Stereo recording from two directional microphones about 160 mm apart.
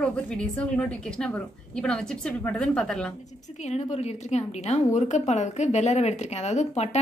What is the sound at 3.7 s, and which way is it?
A woman's voice, 45° left (ahead or behind).